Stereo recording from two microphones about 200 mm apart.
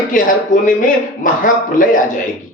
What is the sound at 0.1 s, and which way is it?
Speech, 40° left (ahead or behind).